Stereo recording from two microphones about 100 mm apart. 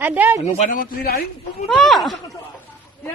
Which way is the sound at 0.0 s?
20° right (ahead or behind).